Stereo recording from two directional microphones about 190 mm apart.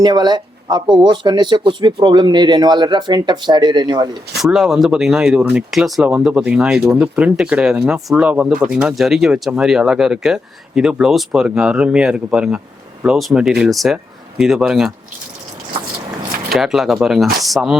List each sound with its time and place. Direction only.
0.0 s speech: 20° right (ahead or behind)
4.4 s speech: centre (ahead or behind)
16.5 s speech: centre (ahead or behind)